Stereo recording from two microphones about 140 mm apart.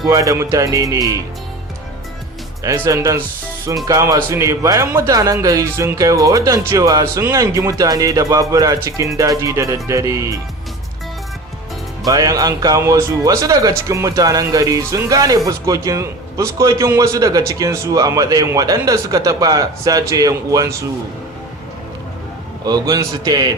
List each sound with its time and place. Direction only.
0.1 s speech: 25° right (ahead or behind)
2.6 s speech: 20° right (ahead or behind)
12.0 s speech: 25° right (ahead or behind)
22.6 s speech: 25° right (ahead or behind)